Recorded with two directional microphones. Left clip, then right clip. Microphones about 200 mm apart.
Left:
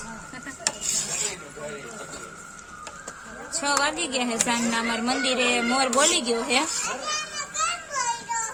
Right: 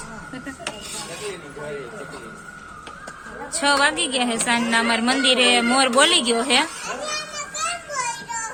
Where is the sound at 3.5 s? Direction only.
Centre (ahead or behind).